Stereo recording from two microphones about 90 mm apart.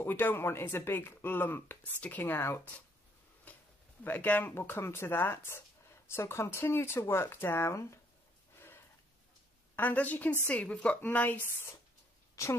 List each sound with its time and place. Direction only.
0.0 s speech: 20° left (ahead or behind)
3.5 s a sound: 20° left (ahead or behind)
4.0 s speech: 20° left (ahead or behind)
8.5 s a sound: 25° left (ahead or behind)
9.8 s speech: 20° left (ahead or behind)
12.4 s speech: 35° left (ahead or behind)